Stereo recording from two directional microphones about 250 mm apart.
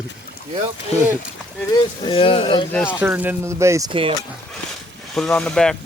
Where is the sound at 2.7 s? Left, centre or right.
Centre.